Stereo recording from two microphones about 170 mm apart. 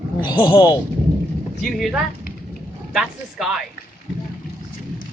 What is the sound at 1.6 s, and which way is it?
Speech, centre (ahead or behind).